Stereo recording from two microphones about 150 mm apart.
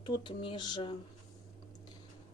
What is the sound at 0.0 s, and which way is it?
Speech, 35° left (ahead or behind).